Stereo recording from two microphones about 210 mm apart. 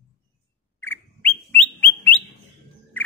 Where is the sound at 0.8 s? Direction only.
10° left (ahead or behind).